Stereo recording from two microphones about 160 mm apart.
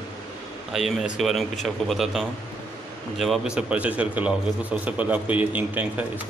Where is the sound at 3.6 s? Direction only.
10° right (ahead or behind).